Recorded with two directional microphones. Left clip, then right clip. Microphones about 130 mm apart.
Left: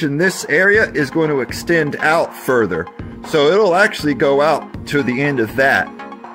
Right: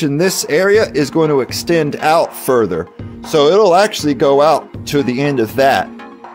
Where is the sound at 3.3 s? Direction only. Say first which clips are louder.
Right 3 dB; 20° right (ahead or behind).